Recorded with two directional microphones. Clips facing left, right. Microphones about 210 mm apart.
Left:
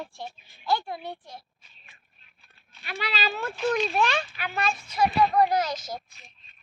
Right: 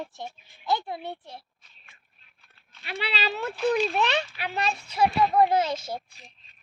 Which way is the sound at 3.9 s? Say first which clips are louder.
Even; 25° right (ahead or behind).